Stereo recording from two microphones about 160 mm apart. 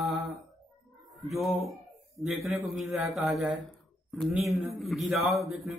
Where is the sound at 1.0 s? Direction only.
Centre (ahead or behind).